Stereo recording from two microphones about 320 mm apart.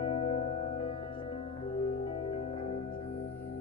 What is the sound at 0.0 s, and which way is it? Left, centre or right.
Music, centre.